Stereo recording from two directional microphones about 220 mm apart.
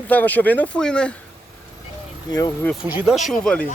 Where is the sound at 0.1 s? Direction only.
10° left (ahead or behind).